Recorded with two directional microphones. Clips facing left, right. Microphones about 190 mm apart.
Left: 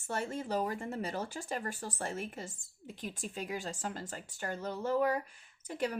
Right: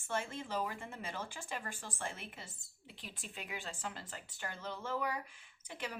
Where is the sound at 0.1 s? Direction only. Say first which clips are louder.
Left 4 dB; 40° left (ahead or behind).